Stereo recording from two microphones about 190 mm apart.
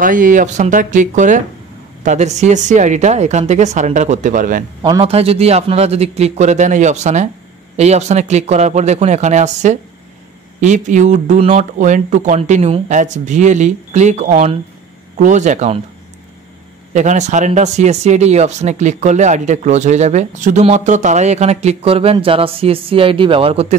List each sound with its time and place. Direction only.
0.0 s speech: 45° right (ahead or behind)
4.8 s speech: 25° right (ahead or behind)
16.9 s speech: 40° right (ahead or behind)